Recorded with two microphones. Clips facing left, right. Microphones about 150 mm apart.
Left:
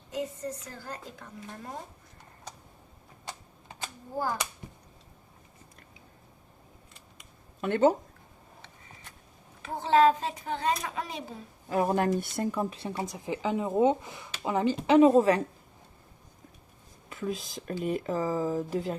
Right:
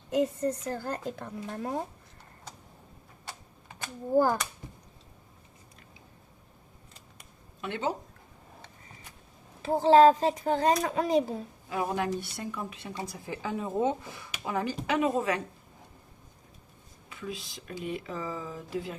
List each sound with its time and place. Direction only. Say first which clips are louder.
0.1 s a woman's voice: right 7 dB; 60° right (ahead or behind)
7.6 s speech: left 9 dB; 45° left (ahead or behind)
9.6 s speech: right 4 dB; 35° right (ahead or behind)
11.7 s a woman's voice: left 4 dB; 45° left (ahead or behind)
13.1 s speech: left 5 dB; 20° left (ahead or behind)
17.1 s speech: left 5 dB; 45° left (ahead or behind)